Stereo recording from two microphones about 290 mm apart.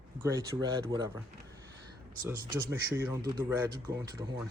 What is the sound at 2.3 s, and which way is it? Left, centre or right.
A man's voice, centre.